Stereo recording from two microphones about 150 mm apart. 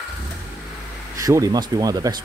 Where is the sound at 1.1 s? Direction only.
20° right (ahead or behind).